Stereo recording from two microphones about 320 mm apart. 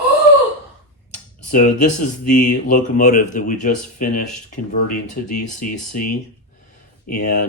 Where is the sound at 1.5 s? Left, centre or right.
Left.